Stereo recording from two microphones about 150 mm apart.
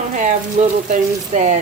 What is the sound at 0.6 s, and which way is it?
Frying, 45° right (ahead or behind).